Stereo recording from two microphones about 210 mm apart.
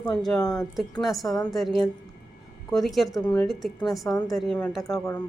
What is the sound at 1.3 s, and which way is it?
Speech, 15° left (ahead or behind).